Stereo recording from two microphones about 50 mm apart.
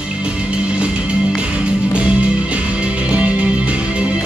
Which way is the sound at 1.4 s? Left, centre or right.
Right.